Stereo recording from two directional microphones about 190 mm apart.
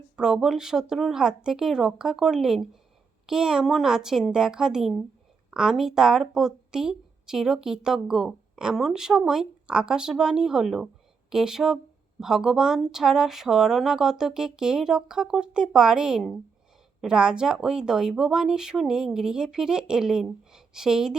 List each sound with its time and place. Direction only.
0.2 s speech: 5° right (ahead or behind)